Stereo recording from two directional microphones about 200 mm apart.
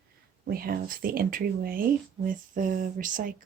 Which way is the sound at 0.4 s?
50° right (ahead or behind).